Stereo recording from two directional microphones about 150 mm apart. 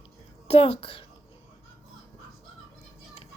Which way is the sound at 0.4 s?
40° left (ahead or behind).